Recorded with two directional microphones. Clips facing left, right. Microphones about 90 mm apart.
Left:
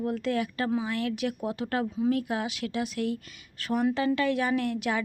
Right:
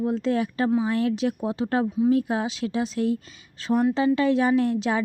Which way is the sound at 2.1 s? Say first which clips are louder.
Right 5 dB; 30° right (ahead or behind).